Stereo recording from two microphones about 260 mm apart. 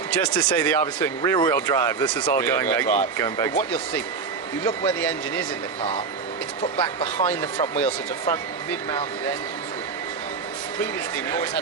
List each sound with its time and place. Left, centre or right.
0.1 s speech: centre
4.6 s speech: centre
6.6 s speech: left
7.3 s speech: centre